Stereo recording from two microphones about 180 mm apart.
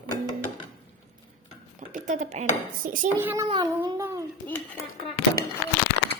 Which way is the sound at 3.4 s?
25° right (ahead or behind).